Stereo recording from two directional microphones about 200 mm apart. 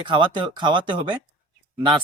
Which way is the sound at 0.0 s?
25° right (ahead or behind).